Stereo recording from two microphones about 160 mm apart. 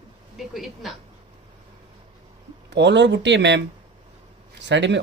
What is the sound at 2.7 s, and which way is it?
Speech, 90° right.